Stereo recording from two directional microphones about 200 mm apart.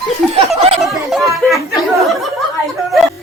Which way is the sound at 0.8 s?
Centre (ahead or behind).